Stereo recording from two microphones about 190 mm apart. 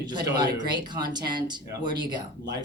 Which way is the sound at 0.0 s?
20° right (ahead or behind).